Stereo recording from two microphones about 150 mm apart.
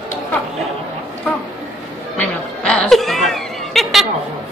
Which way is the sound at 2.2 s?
5° left (ahead or behind).